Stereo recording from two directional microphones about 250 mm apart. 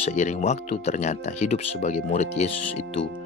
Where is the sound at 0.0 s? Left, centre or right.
Left.